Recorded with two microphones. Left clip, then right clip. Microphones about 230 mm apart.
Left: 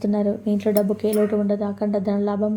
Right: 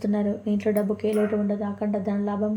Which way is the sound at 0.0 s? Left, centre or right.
Centre.